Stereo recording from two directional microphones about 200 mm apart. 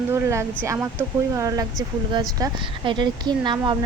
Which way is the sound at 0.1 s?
15° right (ahead or behind).